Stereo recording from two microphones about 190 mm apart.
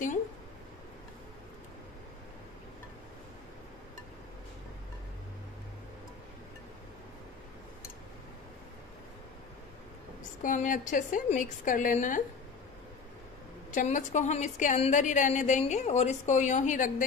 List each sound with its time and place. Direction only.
10.4 s a woman's voice: 45° left (ahead or behind)
13.7 s a woman's voice: 40° left (ahead or behind)